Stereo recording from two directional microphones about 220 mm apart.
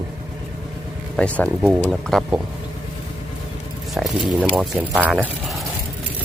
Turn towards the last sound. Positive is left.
turn(degrees=0)  # may be behind; listen again after turning